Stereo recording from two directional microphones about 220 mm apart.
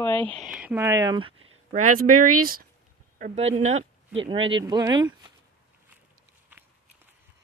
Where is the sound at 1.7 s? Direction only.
35° right (ahead or behind); by 5.3 s 20° right (ahead or behind).